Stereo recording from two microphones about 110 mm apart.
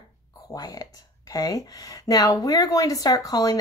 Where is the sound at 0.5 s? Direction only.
35° left (ahead or behind).